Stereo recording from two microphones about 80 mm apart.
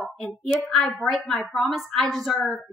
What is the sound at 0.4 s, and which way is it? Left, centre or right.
A woman's voice, centre.